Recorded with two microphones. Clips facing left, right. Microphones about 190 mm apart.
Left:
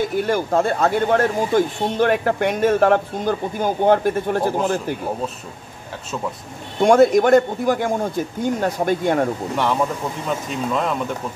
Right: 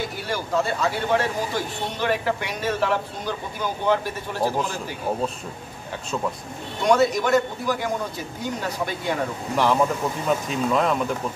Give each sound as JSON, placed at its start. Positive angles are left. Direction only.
{"t": 0.2, "sound": "speech", "side_deg": 50}
{"t": 6.8, "sound": "speech", "side_deg": 50}
{"t": 10.2, "sound": "speech", "side_deg": 0}